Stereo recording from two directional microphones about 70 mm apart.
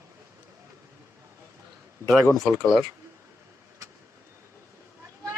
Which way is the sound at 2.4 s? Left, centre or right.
Centre.